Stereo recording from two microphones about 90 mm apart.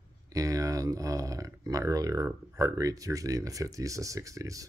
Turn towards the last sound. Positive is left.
turn(degrees=-35)  # may be behind; listen again after turning